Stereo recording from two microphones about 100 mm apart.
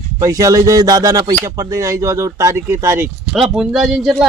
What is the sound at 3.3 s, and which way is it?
Speech, 5° right (ahead or behind).